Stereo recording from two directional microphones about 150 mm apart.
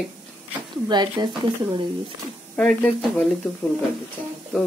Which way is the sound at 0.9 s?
30° right (ahead or behind).